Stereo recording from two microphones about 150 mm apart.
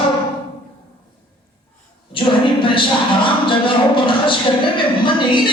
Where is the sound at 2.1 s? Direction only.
35° left (ahead or behind).